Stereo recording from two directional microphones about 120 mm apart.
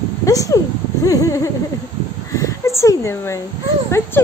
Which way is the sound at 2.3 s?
25° left (ahead or behind).